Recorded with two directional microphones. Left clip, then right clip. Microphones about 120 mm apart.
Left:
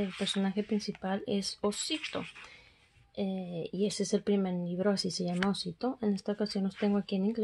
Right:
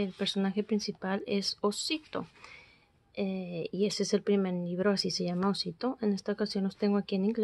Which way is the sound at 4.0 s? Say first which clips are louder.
Right 2 dB; 45° right (ahead or behind).